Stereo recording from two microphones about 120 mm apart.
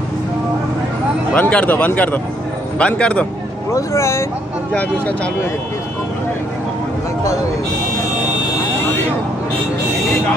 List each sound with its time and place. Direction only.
1.3 s speech: 10° left (ahead or behind)
3.7 s speech: 25° left (ahead or behind)
4.7 s speech: 10° left (ahead or behind)